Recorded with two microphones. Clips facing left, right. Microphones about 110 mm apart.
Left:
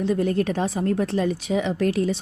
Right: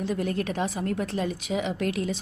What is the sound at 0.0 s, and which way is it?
A woman's voice, 30° left (ahead or behind).